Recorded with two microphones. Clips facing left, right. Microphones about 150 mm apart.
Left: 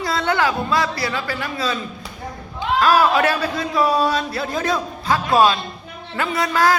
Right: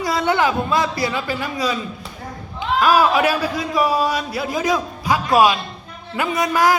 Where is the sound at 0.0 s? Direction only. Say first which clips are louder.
Right 2 dB; 15° right (ahead or behind).